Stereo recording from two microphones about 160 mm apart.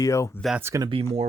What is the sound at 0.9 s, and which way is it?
Speech, 35° right (ahead or behind).